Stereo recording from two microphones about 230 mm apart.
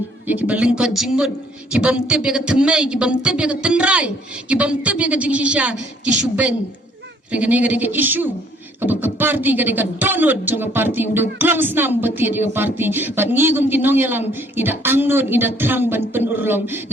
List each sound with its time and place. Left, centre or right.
0.3 s speech: centre
7.3 s speech: centre